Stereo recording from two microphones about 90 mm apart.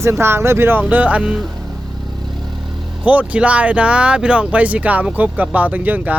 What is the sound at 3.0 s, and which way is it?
Speech, 15° right (ahead or behind).